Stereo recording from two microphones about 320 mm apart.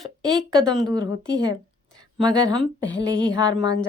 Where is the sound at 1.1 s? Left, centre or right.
Left.